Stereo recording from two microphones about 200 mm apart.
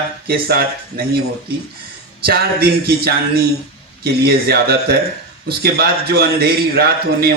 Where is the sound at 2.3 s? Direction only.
50° right (ahead or behind).